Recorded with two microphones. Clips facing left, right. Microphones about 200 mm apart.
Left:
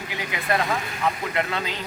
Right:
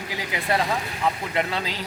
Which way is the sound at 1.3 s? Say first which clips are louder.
Even; 30° right (ahead or behind).